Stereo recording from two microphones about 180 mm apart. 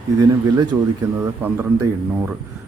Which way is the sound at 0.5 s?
25° right (ahead or behind).